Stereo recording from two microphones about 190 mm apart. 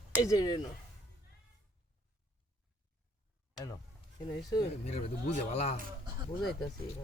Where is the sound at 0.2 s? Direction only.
20° left (ahead or behind).